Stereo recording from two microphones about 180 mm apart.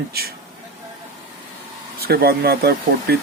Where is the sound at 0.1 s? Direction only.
60° right (ahead or behind).